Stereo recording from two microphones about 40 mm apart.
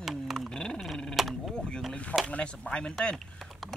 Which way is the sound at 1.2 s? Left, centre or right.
Centre.